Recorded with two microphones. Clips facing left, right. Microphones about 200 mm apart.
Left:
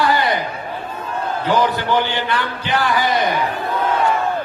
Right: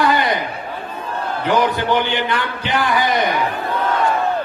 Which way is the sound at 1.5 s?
20° right (ahead or behind).